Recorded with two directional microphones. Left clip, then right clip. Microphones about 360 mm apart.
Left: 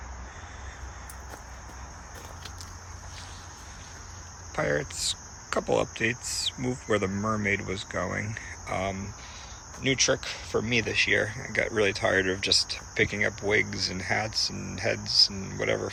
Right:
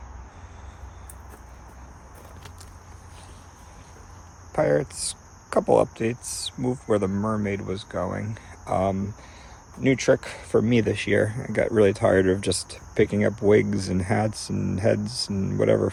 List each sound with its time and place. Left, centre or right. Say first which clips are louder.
4.5 s speech: right 6 dB; centre